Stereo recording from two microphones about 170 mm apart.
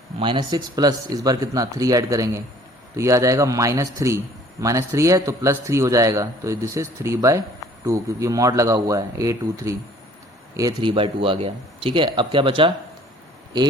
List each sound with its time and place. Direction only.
0.2 s speech: 25° right (ahead or behind)
10.8 s speech: 30° right (ahead or behind)